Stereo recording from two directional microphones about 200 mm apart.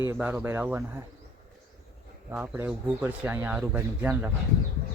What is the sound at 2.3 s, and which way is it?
Speech, 10° right (ahead or behind).